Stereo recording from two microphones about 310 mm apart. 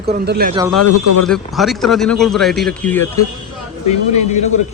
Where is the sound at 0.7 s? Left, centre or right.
Left.